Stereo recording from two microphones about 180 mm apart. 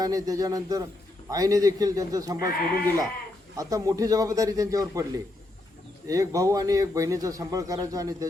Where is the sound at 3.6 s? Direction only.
20° right (ahead or behind).